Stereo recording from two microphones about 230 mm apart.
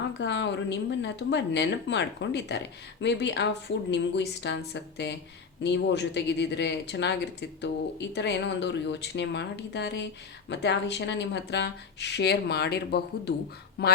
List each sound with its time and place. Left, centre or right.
0.2 s speech: left